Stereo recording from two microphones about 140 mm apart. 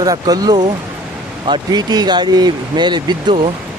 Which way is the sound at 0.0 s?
25° right (ahead or behind).